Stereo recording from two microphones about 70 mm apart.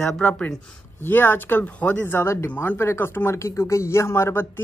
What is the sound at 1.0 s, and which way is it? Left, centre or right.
Speech, left.